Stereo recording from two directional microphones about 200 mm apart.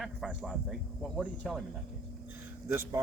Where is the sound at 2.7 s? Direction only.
10° right (ahead or behind).